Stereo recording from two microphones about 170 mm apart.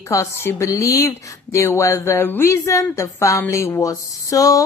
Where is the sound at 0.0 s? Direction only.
15° left (ahead or behind).